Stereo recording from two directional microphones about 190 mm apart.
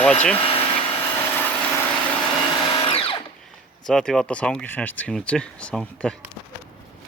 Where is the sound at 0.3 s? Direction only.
30° left (ahead or behind).